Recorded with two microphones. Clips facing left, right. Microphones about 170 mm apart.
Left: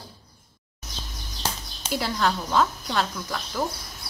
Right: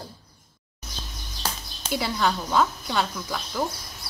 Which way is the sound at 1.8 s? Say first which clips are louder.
Even; centre (ahead or behind).